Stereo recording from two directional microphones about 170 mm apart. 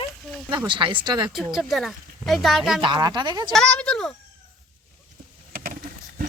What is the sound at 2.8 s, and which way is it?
Speech, 25° right (ahead or behind).